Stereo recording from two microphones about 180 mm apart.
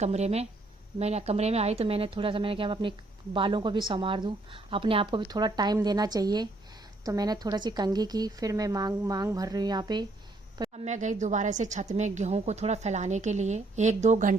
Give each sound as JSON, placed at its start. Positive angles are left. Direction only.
{"t": 0.0, "sound": "a woman's voice", "side_deg": -40}
{"t": 10.7, "sound": "a woman's voice", "side_deg": -40}